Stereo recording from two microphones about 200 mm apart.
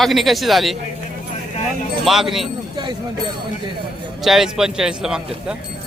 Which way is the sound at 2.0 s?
Centre (ahead or behind).